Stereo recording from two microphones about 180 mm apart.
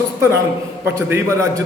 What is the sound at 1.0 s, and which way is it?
Speech, 15° right (ahead or behind).